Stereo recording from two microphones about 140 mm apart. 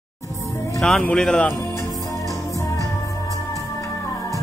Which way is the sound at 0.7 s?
5° left (ahead or behind).